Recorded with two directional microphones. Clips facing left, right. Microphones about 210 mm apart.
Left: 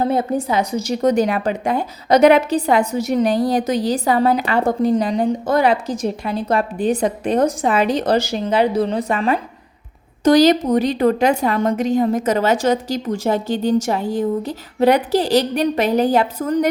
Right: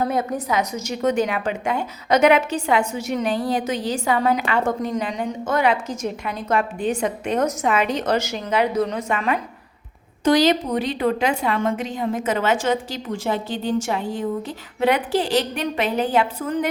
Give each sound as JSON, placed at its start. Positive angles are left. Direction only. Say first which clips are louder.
{"t": 0.0, "sound": "a woman's voice", "louder": "left 4 dB", "side_deg": 30}